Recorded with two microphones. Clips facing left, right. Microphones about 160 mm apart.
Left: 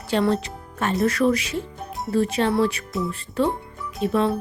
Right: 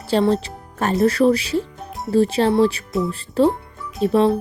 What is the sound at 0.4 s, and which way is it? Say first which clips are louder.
Music: right 3 dB; 40° right (ahead or behind).